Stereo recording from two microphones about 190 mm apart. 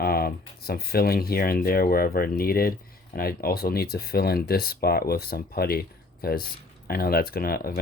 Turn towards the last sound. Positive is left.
turn(degrees=50)  # may be behind; listen again after turning